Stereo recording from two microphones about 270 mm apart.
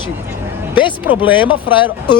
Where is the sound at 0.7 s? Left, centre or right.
Centre.